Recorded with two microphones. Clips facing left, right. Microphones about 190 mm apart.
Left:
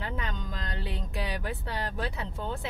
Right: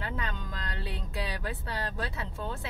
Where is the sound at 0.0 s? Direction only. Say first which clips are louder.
Left 1 dB; 20° left (ahead or behind).